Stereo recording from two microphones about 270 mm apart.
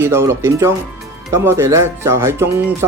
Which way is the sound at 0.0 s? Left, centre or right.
Centre.